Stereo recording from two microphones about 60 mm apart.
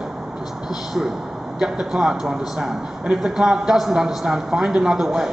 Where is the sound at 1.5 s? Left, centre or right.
Centre.